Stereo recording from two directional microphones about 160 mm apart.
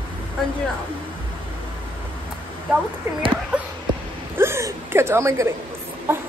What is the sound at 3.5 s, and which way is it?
Speech, 5° right (ahead or behind).